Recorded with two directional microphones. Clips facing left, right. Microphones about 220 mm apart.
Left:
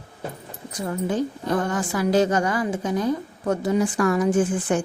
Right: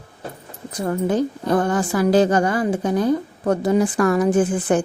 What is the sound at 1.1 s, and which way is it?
A woman's voice, 35° right (ahead or behind).